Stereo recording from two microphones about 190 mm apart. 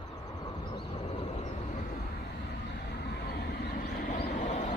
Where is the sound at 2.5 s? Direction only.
55° left (ahead or behind); by 4.7 s 40° left (ahead or behind).